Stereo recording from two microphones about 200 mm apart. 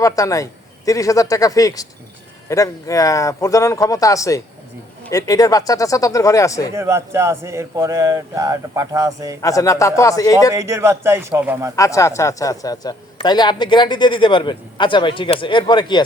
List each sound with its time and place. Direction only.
0.0 s speech: 15° left (ahead or behind)
6.7 s speech: 15° right (ahead or behind)
9.4 s speech: 15° left (ahead or behind)
10.5 s speech: 15° right (ahead or behind)
11.8 s a man's voice: 15° left (ahead or behind)